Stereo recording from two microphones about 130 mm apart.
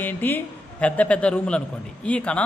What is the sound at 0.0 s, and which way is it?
Speech, 15° left (ahead or behind).